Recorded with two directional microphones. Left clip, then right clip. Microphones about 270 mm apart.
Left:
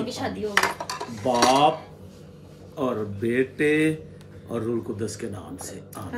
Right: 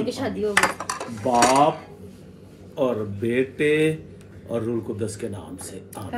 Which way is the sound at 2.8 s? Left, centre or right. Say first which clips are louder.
Right 3 dB; centre.